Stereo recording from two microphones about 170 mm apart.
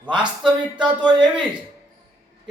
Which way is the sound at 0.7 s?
25° right (ahead or behind).